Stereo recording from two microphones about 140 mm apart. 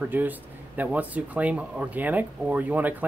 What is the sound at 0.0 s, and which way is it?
Speech, 10° right (ahead or behind).